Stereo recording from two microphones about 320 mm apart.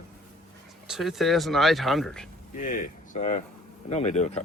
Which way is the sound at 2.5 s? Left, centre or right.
Left.